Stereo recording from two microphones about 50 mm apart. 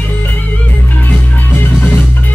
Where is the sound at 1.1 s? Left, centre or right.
Left.